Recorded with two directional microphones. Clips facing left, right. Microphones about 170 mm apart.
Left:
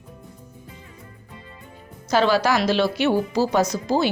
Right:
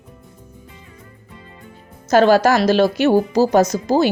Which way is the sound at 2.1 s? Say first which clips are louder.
Right 6 dB; 45° right (ahead or behind).